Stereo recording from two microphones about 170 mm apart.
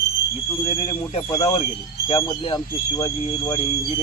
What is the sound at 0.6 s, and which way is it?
Speech, 30° left (ahead or behind).